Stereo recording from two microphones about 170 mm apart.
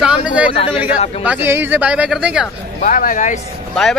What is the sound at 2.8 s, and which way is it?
Speech, 50° left (ahead or behind).